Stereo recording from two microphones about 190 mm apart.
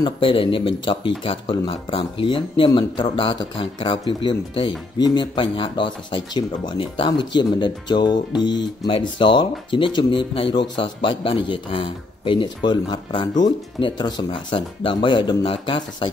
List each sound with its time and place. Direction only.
0.0 s speech: 25° left (ahead or behind)